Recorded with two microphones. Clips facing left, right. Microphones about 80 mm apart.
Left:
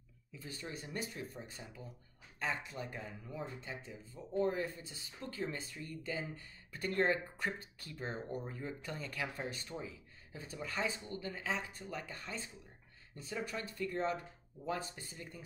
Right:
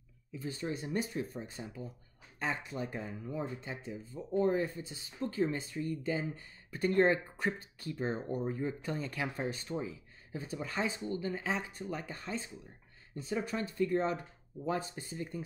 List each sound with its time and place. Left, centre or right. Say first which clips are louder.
0.5 s speech: right 8 dB; right